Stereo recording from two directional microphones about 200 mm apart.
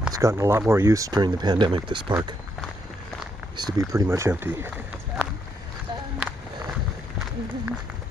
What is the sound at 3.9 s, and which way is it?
Speech, 15° right (ahead or behind).